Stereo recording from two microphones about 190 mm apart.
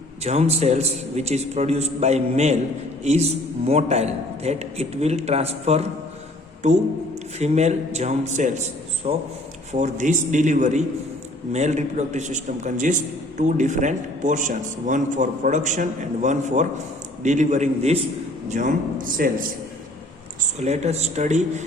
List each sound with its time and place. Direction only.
0.2 s a man's voice: 35° right (ahead or behind)
20.6 s a man's voice: 35° right (ahead or behind)